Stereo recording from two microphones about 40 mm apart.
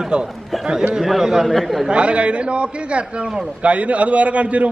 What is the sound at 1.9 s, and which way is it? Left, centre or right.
A man's voice, right.